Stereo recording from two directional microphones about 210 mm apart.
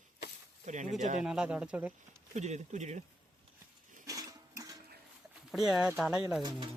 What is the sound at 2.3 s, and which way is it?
Speech, 35° right (ahead or behind).